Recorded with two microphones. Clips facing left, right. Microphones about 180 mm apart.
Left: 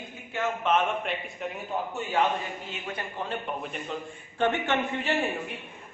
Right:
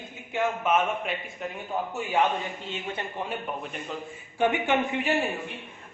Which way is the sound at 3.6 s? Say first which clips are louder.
Left 1 dB; centre (ahead or behind).